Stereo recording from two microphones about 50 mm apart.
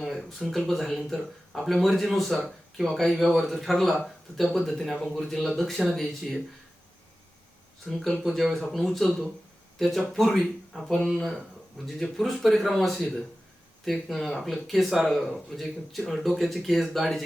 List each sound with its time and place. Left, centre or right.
0.0 s a sound: centre
0.7 s speech: centre
7.9 s speech: centre